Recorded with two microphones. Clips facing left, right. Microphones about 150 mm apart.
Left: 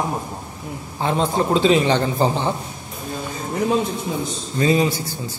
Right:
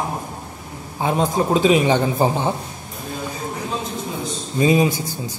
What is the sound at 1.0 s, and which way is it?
A man's voice, 10° right (ahead or behind).